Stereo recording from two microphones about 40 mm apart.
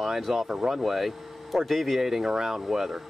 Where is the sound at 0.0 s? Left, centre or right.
Centre.